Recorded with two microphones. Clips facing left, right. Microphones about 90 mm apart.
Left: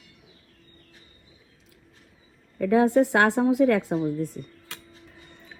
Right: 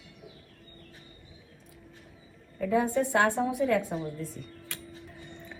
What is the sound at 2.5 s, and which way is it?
A woman's voice, 60° left (ahead or behind).